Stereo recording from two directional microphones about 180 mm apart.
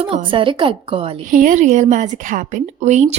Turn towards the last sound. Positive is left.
turn(degrees=-40)  # may be behind; listen again after turning